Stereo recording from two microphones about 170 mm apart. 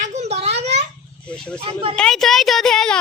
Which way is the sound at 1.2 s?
5° left (ahead or behind).